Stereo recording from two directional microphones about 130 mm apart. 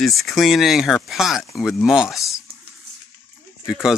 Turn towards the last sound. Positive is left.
turn(degrees=-5)  # may be behind; listen again after turning